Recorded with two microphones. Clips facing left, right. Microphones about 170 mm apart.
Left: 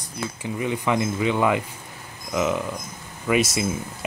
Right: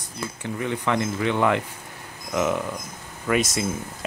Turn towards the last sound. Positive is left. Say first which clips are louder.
# left 1 dB
turn(degrees=10)  # may be behind; listen again after turning